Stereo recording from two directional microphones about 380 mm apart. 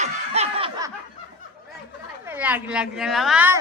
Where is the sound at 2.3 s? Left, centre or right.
Centre.